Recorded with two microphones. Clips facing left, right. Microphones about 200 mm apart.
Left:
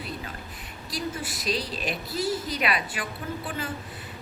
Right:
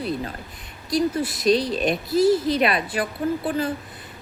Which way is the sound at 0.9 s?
40° right (ahead or behind).